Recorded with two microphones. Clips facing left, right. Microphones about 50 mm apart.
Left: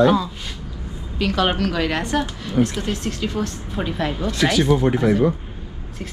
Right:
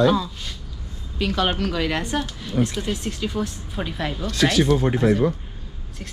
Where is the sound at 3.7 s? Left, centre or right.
Centre.